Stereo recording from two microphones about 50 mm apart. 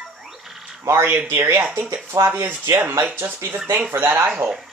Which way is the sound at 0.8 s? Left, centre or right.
Right.